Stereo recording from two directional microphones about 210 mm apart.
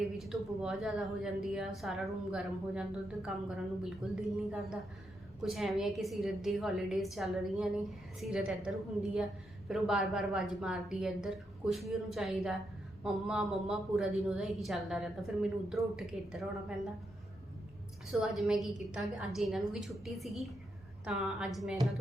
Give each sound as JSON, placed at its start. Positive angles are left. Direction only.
{"t": 0.0, "sound": "speech", "side_deg": 0}
{"t": 3.8, "sound": "speech", "side_deg": 0}
{"t": 18.1, "sound": "speech", "side_deg": 0}